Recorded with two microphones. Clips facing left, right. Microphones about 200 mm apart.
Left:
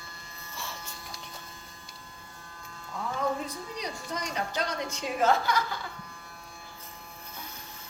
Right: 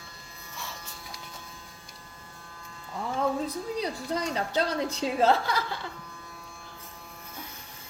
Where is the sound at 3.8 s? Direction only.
30° right (ahead or behind).